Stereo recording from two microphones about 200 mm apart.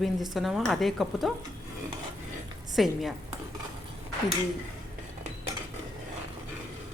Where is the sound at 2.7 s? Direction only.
Centre (ahead or behind).